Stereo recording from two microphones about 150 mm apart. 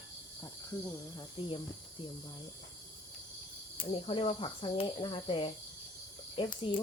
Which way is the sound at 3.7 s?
35° left (ahead or behind).